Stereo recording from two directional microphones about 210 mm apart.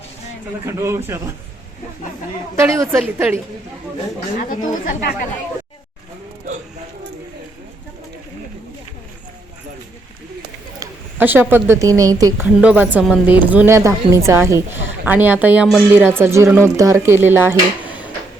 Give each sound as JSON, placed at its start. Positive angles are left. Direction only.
{"t": 0.6, "sound": "a woman's voice", "side_deg": -10}
{"t": 2.6, "sound": "a woman's voice", "side_deg": -15}
{"t": 4.4, "sound": "speech", "side_deg": 40}
{"t": 10.8, "sound": "a woman's voice", "side_deg": -10}